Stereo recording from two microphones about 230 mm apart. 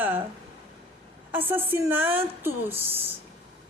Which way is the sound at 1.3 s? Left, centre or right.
Centre.